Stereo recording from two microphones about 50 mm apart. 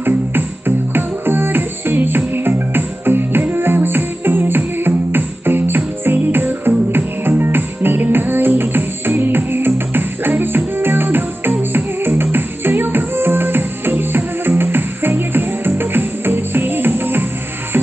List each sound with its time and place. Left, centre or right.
0.0 s music: right